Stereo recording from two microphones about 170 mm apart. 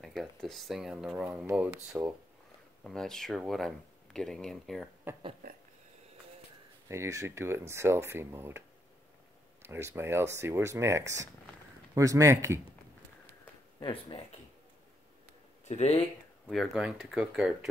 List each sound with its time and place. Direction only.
0.0 s speech: centre (ahead or behind)
1.5 s speech: 15° right (ahead or behind)
2.8 s speech: 5° left (ahead or behind)
5.1 s speech: 10° right (ahead or behind)
5.4 s a sound: 60° right (ahead or behind)
6.9 s speech: 15° right (ahead or behind)
13.7 s speech: 25° left (ahead or behind)
15.7 s speech: 35° left (ahead or behind)
16.4 s speech: centre (ahead or behind)